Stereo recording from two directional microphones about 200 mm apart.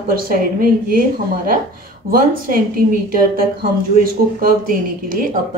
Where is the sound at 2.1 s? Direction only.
45° right (ahead or behind).